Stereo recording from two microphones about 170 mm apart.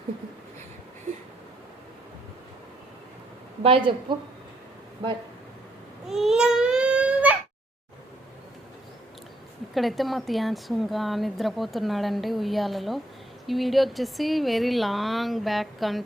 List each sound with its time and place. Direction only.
3.6 s a woman's voice: 30° right (ahead or behind)
6.1 s baby cry: centre (ahead or behind)
9.7 s speech: centre (ahead or behind)